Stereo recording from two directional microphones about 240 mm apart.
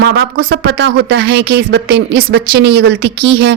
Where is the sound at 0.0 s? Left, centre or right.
Right.